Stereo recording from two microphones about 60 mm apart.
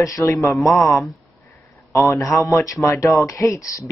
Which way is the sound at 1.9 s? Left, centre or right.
Left.